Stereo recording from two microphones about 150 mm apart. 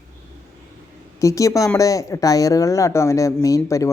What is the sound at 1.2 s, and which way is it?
Speech, 20° left (ahead or behind).